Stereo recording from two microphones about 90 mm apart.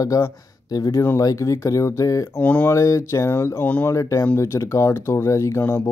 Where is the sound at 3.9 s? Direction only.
35° left (ahead or behind).